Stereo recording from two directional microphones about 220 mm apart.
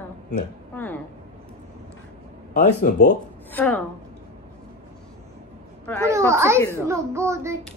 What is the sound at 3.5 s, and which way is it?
Speech, 10° left (ahead or behind).